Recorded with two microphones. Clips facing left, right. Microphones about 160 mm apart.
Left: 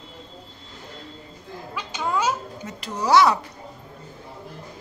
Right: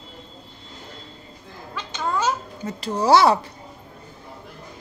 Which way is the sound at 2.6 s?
30° right (ahead or behind).